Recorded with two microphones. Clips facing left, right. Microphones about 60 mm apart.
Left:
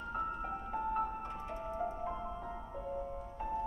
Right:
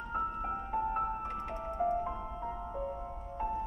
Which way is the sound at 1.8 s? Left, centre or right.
Right.